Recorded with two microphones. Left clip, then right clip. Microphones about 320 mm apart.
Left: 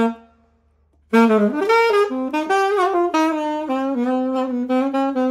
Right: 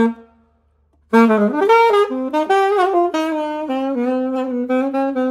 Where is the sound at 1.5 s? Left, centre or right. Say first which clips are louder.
Right 4 dB; centre.